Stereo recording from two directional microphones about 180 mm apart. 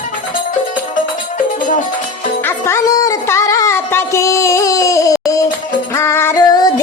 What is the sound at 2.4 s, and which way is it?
Music, 15° left (ahead or behind).